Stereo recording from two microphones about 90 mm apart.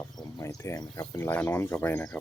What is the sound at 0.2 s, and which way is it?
Cricket, 40° left (ahead or behind).